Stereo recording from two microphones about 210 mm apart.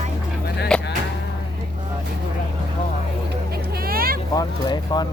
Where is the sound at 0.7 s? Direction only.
5° left (ahead or behind).